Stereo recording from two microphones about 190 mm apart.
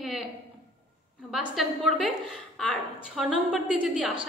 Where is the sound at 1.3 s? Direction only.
Centre (ahead or behind).